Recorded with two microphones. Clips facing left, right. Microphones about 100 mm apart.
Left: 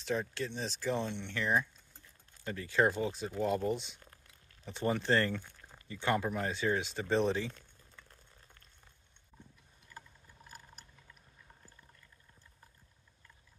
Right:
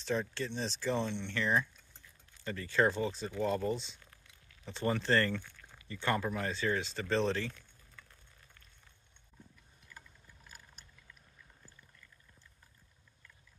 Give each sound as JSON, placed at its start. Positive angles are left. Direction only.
{"t": 0.0, "sound": "speech", "side_deg": 5}
{"t": 4.0, "sound": "a sound", "side_deg": 40}
{"t": 4.6, "sound": "speech", "side_deg": 10}